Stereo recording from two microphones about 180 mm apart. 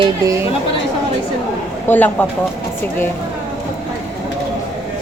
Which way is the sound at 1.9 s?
10° left (ahead or behind).